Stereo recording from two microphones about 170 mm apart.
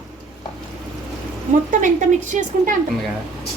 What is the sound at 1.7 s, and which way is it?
A woman's voice, 50° right (ahead or behind).